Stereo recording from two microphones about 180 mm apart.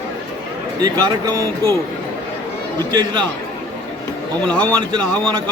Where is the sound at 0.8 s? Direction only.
20° right (ahead or behind).